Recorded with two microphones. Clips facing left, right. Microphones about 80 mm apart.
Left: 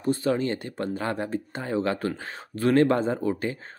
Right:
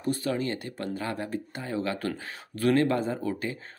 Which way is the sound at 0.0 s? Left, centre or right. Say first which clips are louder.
Left 4 dB; left.